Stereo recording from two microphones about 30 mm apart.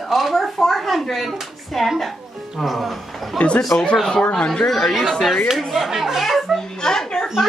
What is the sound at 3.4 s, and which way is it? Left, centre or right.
Speech, left.